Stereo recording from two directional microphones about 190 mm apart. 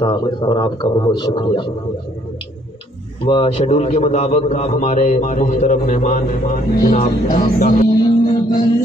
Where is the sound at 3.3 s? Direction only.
30° left (ahead or behind).